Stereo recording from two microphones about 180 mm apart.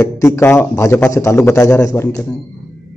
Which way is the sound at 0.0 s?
15° left (ahead or behind).